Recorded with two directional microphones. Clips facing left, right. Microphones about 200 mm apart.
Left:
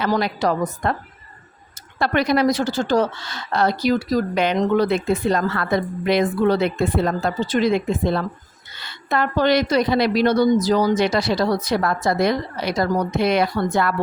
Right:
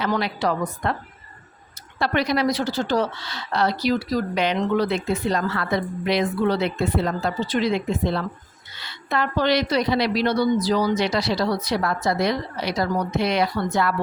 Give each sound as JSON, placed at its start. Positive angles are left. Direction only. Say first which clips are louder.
{"t": 0.1, "sound": "a woman's voice", "louder": "left 3 dB", "side_deg": 40}
{"t": 2.0, "sound": "a woman's voice", "louder": "left 3 dB", "side_deg": 50}